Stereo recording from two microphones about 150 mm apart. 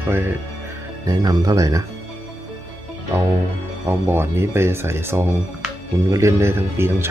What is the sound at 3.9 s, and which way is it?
Speech, 15° right (ahead or behind).